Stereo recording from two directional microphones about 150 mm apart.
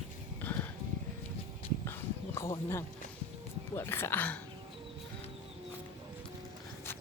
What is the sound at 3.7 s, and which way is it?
Speech, 15° left (ahead or behind).